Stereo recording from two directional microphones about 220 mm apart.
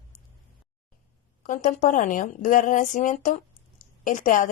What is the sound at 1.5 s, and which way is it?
A woman's voice, 35° left (ahead or behind).